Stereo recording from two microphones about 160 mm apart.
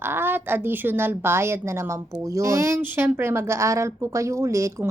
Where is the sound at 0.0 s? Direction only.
15° right (ahead or behind).